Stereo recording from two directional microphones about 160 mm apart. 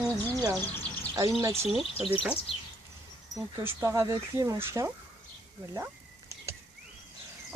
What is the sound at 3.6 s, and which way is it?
Speech, 15° right (ahead or behind).